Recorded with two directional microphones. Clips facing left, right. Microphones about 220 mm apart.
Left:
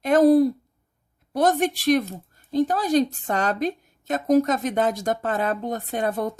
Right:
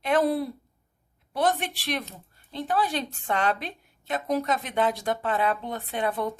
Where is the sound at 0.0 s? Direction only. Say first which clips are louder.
Left 8 dB; 40° left (ahead or behind).